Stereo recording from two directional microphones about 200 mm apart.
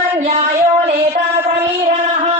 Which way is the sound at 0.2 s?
30° right (ahead or behind).